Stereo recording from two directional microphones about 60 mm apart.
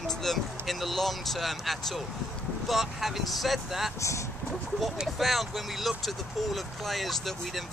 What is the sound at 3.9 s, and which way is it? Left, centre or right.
Speech, left.